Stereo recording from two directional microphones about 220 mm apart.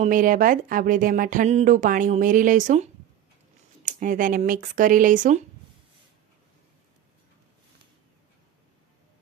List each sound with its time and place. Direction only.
0.0 s speech: 40° right (ahead or behind)